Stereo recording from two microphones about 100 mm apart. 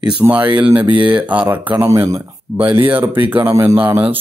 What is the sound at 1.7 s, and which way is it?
Speech, 25° right (ahead or behind).